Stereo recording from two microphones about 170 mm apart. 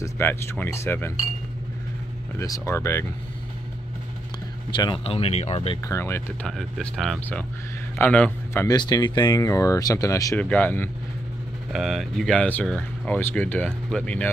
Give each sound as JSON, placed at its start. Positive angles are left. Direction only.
{"t": 0.0, "sound": "speech", "side_deg": 15}
{"t": 2.3, "sound": "speech", "side_deg": 20}
{"t": 4.7, "sound": "speech", "side_deg": 30}
{"t": 5.9, "sound": "speech", "side_deg": 15}
{"t": 6.4, "sound": "speech", "side_deg": 5}
{"t": 8.6, "sound": "speech", "side_deg": 25}
{"t": 10.4, "sound": "speech", "side_deg": 10}
{"t": 11.7, "sound": "speech", "side_deg": 0}